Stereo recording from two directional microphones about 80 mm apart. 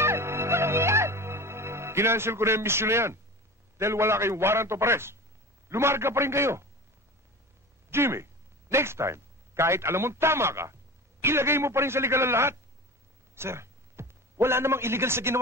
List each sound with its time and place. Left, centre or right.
0.0 s music: right
3.7 s a man's voice: right
7.9 s a man's voice: right
13.3 s a sound: right